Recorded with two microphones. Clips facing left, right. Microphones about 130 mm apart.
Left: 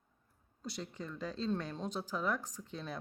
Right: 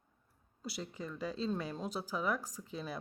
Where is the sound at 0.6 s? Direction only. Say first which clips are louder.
Right 1 dB; 5° right (ahead or behind).